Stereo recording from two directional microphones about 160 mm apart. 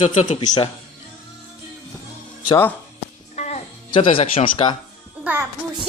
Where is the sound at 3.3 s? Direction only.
45° left (ahead or behind).